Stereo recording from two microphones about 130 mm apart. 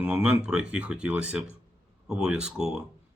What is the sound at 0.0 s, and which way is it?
Speech, 5° right (ahead or behind).